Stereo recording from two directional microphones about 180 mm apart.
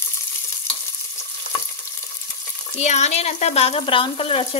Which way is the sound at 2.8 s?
40° left (ahead or behind).